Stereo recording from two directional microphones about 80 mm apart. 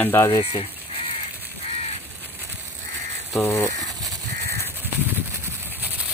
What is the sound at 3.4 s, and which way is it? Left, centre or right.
Speech, left.